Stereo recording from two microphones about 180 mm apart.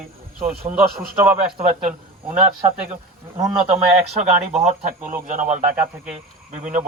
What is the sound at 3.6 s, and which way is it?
Speech, 35° right (ahead or behind).